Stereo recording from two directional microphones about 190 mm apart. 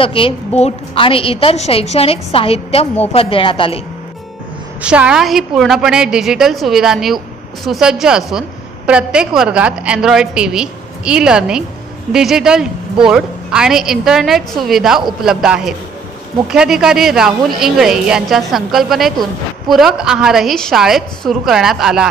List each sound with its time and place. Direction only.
0.0 s a woman's voice: 30° left (ahead or behind)
4.8 s a woman's voice: 5° right (ahead or behind)